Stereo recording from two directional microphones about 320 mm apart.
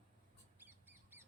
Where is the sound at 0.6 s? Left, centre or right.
Centre.